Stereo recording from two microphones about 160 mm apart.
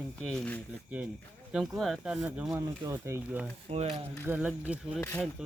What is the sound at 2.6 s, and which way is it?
Speech, 20° right (ahead or behind).